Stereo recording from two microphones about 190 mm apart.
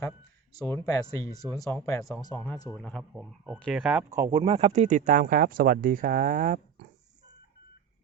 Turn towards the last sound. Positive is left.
turn(degrees=-45)  # may be behind; listen again after turning